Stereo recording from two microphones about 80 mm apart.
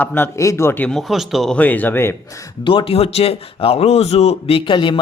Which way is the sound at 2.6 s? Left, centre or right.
Left.